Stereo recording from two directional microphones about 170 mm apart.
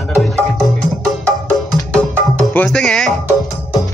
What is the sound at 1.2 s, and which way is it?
Music, 5° left (ahead or behind).